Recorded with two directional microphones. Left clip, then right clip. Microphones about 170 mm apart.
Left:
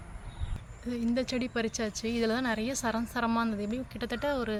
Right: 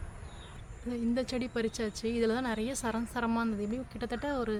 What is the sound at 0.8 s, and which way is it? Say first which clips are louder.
Speech: left 2 dB; 10° left (ahead or behind).